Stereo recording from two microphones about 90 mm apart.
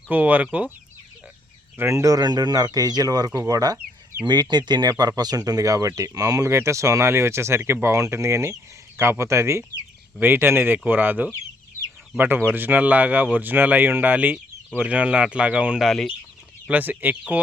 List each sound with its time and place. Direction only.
0.1 s speech: 20° right (ahead or behind)
1.8 s speech: 35° right (ahead or behind)
4.3 s speech: 55° right (ahead or behind); by 15.9 s 10° right (ahead or behind)
15.9 s speech: centre (ahead or behind)
16.6 s speech: 20° right (ahead or behind)